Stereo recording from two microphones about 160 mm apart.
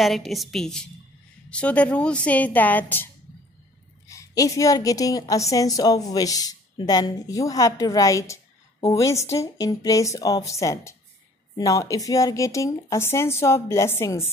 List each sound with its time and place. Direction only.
0.0 s a woman's voice: centre (ahead or behind)
4.1 s a woman's voice: 20° left (ahead or behind)